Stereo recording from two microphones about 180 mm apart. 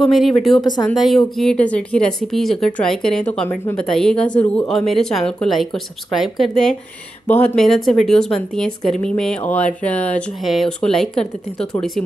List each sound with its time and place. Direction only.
0.0 s speech: centre (ahead or behind)
0.6 s speech: 25° left (ahead or behind)
0.8 s speech: centre (ahead or behind)